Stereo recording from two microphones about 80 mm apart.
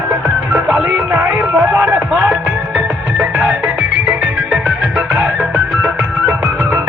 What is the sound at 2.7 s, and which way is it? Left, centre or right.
Music, centre.